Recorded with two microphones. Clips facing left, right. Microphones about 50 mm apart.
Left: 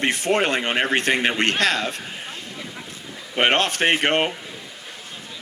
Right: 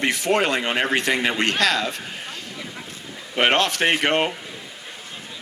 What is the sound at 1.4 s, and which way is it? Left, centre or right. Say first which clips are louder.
Speech: even; left.